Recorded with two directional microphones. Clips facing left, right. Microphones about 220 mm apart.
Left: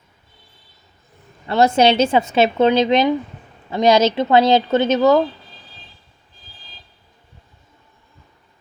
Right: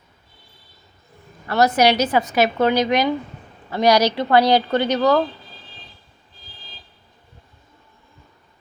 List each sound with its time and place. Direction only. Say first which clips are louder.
1.5 s a woman's voice: left 2 dB; 25° left (ahead or behind)